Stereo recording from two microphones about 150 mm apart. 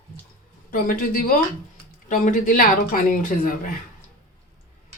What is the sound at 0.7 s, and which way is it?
A man's voice, 70° left (ahead or behind).